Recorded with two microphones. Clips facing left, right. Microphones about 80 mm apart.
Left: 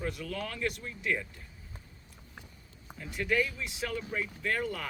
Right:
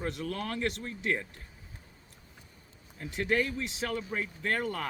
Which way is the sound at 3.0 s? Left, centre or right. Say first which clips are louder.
Right 1 dB; right.